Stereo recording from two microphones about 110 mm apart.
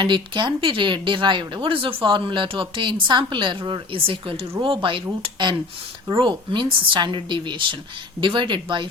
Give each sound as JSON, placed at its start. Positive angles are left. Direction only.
{"t": 0.0, "sound": "speech", "side_deg": -45}